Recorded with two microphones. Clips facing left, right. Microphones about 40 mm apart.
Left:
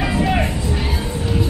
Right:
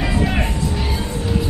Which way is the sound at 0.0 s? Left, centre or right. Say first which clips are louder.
Left 2 dB; centre.